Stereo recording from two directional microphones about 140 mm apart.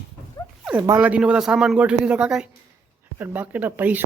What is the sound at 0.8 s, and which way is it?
A woman's voice, 15° right (ahead or behind).